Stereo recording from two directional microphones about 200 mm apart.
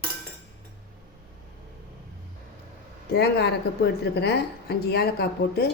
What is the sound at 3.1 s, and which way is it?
A woman's voice, 55° left (ahead or behind).